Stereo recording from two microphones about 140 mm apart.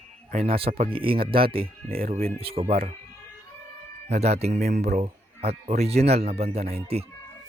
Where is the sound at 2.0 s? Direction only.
90° right.